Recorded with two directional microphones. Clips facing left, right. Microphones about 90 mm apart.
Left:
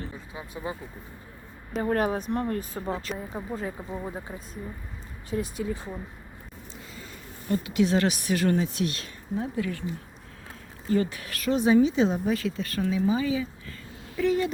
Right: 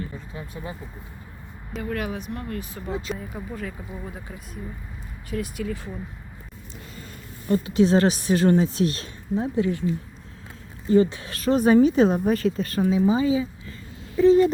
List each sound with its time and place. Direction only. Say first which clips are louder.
0.3 s speech: left 2 dB; 20° left (ahead or behind)
1.7 s speech: left 4 dB; 35° left (ahead or behind)
3.2 s speech: left 1 dB; 25° left (ahead or behind)
7.5 s a woman's voice: right 5 dB; 35° right (ahead or behind)
10.8 s a woman's voice: right 7 dB; 25° right (ahead or behind)
11.5 s speech: right 4 dB; 50° right (ahead or behind)
12.8 s a woman's voice: right 5 dB; 20° right (ahead or behind)